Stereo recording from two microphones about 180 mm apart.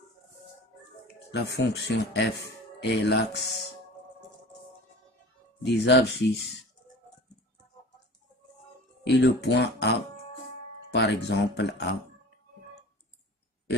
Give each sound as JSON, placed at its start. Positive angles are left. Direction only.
{"t": 1.0, "sound": "speech", "side_deg": 65}
{"t": 5.6, "sound": "speech", "side_deg": 70}
{"t": 9.0, "sound": "speech", "side_deg": 70}